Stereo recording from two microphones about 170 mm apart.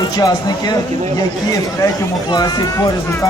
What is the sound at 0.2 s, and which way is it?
Speech, 25° left (ahead or behind).